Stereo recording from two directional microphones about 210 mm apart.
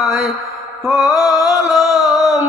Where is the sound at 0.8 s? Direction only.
Centre (ahead or behind).